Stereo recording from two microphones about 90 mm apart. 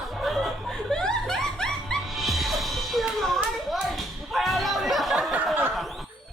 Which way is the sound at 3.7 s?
Centre (ahead or behind).